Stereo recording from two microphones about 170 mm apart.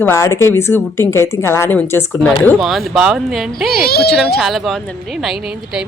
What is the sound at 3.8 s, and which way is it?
Speech, 65° left (ahead or behind).